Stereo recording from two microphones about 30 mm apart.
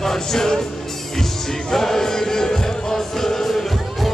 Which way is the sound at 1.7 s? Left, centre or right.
Centre.